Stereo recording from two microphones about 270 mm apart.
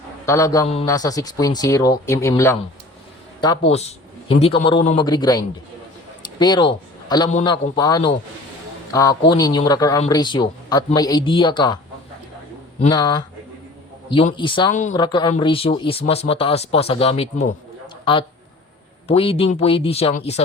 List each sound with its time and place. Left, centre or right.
0.3 s a man's voice: centre
3.7 s a man's voice: left
6.4 s a man's voice: centre
7.5 s a man's voice: centre
12.8 s a man's voice: centre
14.9 s speech: centre